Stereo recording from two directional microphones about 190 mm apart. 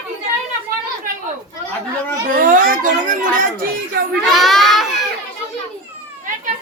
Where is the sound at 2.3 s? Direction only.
45° right (ahead or behind).